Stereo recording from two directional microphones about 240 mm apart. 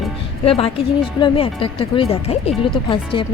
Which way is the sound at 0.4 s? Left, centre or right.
Left.